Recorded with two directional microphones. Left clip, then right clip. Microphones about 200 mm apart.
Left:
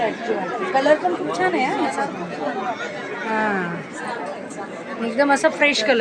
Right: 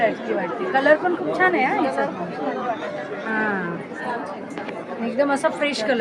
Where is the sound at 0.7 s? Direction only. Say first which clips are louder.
Even; 10° left (ahead or behind).